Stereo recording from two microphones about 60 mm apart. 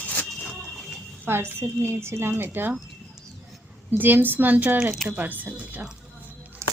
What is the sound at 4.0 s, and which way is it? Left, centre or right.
Speech, right.